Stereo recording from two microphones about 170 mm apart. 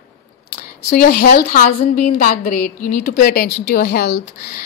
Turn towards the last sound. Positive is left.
turn(degrees=55)  # may be behind; listen again after turning